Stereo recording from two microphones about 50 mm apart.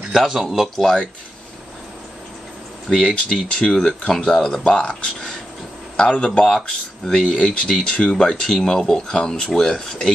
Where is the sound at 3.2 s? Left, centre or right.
Centre.